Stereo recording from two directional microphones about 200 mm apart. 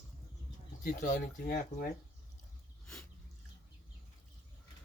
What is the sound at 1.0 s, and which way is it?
Speech, 45° left (ahead or behind).